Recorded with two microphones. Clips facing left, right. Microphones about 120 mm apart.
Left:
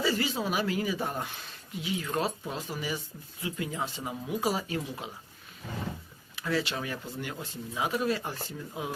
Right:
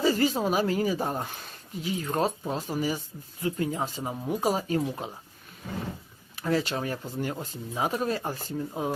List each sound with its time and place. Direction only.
0.0 s speech: 45° right (ahead or behind)
6.3 s speech: 40° right (ahead or behind)